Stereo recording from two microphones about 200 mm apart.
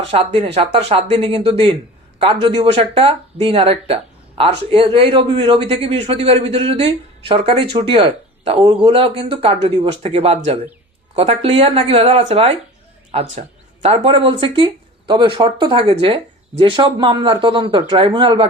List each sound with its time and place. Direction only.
0.0 s speech: 30° right (ahead or behind)